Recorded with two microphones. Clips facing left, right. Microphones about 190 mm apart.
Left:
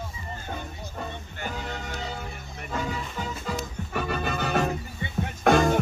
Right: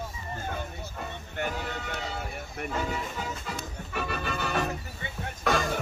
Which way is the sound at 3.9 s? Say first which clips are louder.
Left 3 dB; 45° left (ahead or behind).